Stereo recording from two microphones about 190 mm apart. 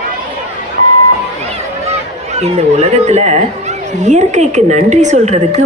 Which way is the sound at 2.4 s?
35° right (ahead or behind).